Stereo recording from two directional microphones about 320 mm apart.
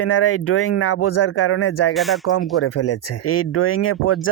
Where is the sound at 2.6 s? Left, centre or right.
Left.